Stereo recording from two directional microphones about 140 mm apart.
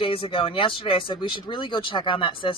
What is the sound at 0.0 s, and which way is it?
A woman's voice, 40° left (ahead or behind).